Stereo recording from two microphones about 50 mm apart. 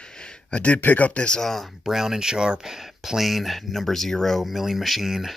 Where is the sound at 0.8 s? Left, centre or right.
Left.